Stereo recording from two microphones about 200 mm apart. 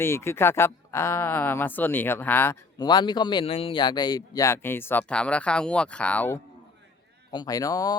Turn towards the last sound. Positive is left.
turn(degrees=20)  # may be behind; listen again after turning